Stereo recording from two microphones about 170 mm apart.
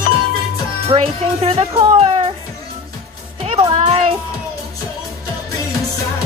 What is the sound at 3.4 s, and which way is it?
Music, 30° right (ahead or behind).